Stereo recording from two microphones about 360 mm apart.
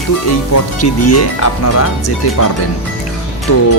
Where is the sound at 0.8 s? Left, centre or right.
Left.